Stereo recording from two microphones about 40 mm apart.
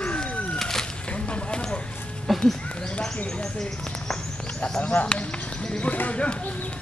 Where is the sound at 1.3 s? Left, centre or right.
Left.